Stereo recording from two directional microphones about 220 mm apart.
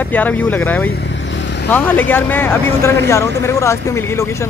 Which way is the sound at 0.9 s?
55° left (ahead or behind).